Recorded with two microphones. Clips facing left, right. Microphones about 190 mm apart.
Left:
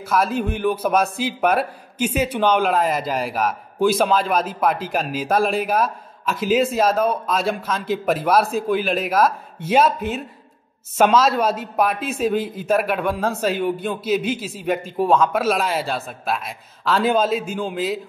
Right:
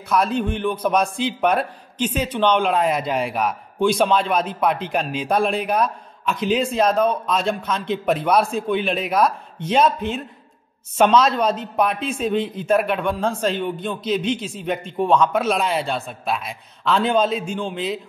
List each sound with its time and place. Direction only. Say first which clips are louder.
0.1 s a man's voice: even; 5° left (ahead or behind)